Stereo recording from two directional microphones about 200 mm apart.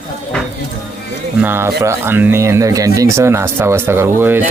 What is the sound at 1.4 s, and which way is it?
Speech, 10° right (ahead or behind).